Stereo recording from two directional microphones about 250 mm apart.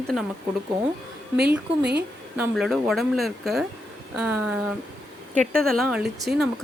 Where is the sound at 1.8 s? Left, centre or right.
Right.